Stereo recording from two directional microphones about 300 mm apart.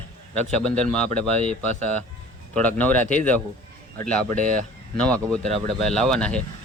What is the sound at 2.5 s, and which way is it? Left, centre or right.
Speech, centre.